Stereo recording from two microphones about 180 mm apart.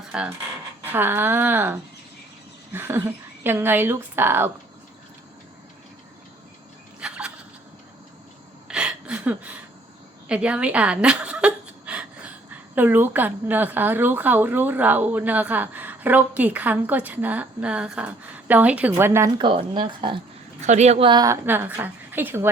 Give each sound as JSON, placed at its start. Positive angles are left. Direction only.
{"t": 0.1, "sound": "a woman's voice", "side_deg": -5}
{"t": 7.0, "sound": "a sound", "side_deg": -5}
{"t": 8.6, "sound": "a sound", "side_deg": -5}
{"t": 12.7, "sound": "a woman's voice", "side_deg": -10}
{"t": 19.4, "sound": "speech", "side_deg": -25}
{"t": 20.6, "sound": "speech", "side_deg": -40}
{"t": 21.4, "sound": "a woman's voice", "side_deg": -10}